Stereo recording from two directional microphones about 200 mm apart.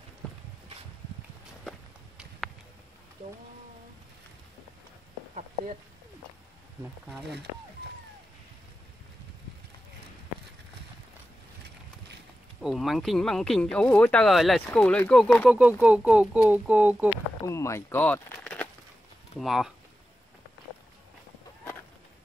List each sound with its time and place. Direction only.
1.7 s walk: centre (ahead or behind)
12.6 s speech: centre (ahead or behind)
15.8 s speech: 5° right (ahead or behind)
17.5 s speech: 15° left (ahead or behind)